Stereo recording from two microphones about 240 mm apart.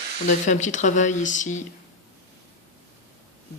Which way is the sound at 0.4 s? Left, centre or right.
Left.